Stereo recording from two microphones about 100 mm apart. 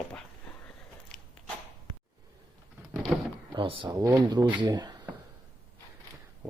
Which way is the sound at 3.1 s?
5° right (ahead or behind).